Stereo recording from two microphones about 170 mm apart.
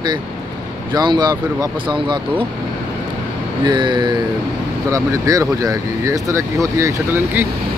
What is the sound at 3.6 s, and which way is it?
Speech, 25° right (ahead or behind).